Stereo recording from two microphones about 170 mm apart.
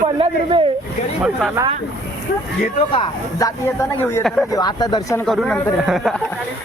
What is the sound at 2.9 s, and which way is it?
Speech, 20° left (ahead or behind).